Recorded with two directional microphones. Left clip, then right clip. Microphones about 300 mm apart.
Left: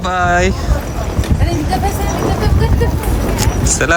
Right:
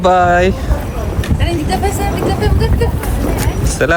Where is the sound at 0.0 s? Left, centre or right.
Centre.